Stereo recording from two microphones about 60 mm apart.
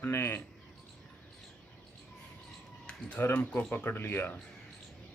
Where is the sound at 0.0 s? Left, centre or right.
Left.